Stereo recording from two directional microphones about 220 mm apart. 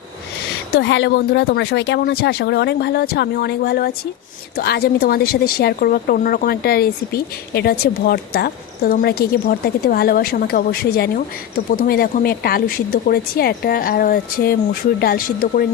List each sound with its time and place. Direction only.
0.7 s a woman's voice: 55° left (ahead or behind)